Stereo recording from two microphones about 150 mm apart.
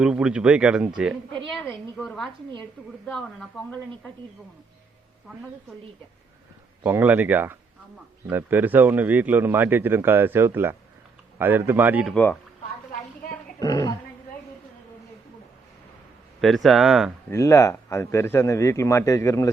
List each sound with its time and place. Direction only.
0.0 s speech: 5° right (ahead or behind)
1.7 s speech: 5° left (ahead or behind)
5.3 s speech: centre (ahead or behind)
6.8 s a man's voice: 10° right (ahead or behind)
12.1 s speech: 10° left (ahead or behind)
13.6 s a man's voice: 25° left (ahead or behind)
16.6 s speech: centre (ahead or behind)
17.3 s a man's voice: 20° left (ahead or behind)